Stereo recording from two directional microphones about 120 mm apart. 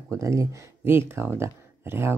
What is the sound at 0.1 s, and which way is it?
Speech, 25° right (ahead or behind).